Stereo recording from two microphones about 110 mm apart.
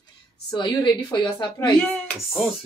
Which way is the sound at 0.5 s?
40° left (ahead or behind).